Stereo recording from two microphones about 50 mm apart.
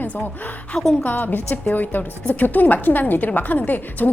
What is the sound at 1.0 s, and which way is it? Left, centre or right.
A woman's voice, left.